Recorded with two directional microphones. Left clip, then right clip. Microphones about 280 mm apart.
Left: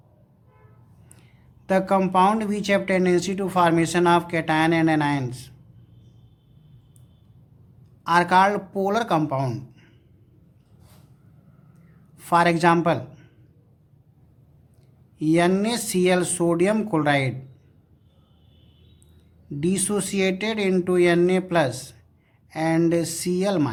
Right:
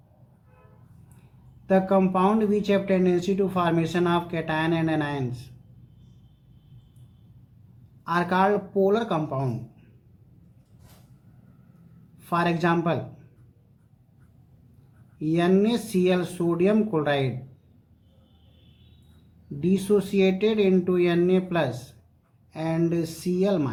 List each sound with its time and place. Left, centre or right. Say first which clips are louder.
1.6 s speech: left 1 dB; left
8.0 s speech: left 5 dB; left
12.2 s speech: left 6 dB; left
15.2 s speech: left 2 dB; left
19.5 s speech: right 2 dB; left